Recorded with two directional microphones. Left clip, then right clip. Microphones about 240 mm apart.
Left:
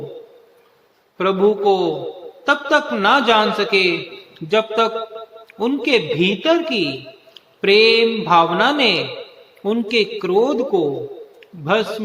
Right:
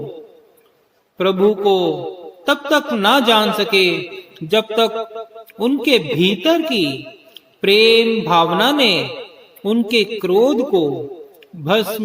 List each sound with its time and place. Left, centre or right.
1.2 s a man's voice: right